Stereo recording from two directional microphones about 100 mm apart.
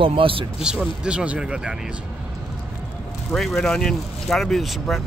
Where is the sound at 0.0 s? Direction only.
60° right (ahead or behind).